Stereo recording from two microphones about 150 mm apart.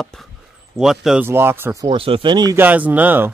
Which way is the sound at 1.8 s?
35° right (ahead or behind).